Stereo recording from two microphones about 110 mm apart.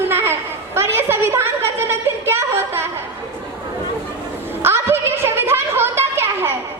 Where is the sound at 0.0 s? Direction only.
20° right (ahead or behind).